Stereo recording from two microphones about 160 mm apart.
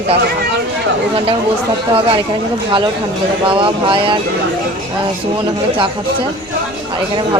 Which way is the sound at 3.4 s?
30° right (ahead or behind).